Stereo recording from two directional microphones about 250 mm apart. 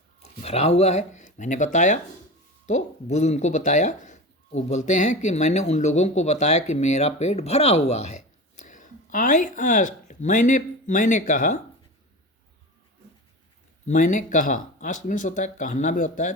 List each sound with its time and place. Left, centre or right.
0.2 s speech: left
13.8 s speech: left